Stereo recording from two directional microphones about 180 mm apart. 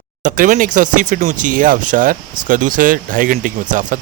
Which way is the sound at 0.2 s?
50° right (ahead or behind).